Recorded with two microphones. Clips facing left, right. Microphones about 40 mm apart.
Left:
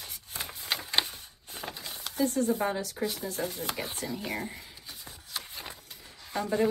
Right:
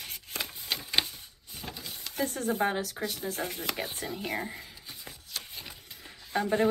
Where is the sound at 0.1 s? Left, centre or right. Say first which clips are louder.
Right 5 dB; right.